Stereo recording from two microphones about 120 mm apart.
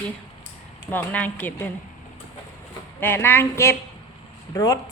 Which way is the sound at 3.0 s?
20° left (ahead or behind).